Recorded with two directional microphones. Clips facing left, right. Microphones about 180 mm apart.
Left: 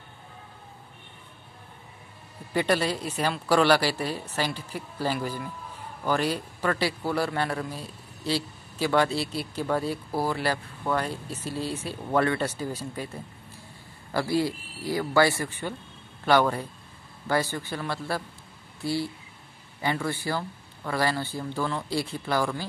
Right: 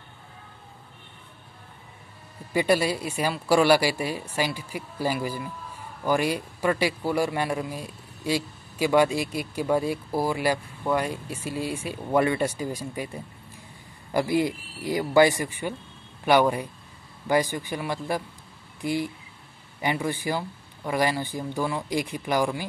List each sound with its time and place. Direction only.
2.5 s a man's voice: 10° right (ahead or behind)